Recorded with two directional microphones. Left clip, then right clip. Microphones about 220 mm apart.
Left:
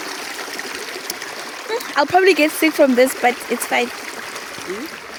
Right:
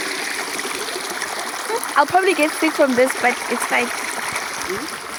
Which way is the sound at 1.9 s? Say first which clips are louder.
Left 2 dB; 35° left (ahead or behind).